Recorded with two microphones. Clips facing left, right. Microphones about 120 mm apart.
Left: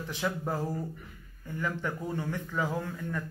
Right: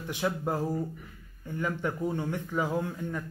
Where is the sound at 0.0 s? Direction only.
15° right (ahead or behind).